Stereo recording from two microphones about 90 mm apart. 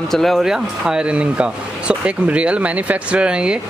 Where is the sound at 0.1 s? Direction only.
Centre (ahead or behind).